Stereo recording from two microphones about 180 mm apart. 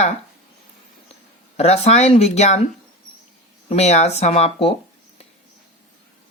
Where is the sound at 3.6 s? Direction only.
35° left (ahead or behind).